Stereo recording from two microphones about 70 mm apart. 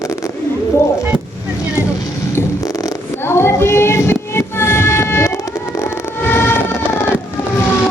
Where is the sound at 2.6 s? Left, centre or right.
Left.